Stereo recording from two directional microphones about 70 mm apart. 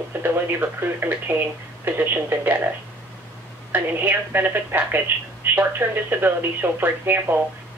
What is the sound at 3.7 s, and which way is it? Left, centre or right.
Speech, right.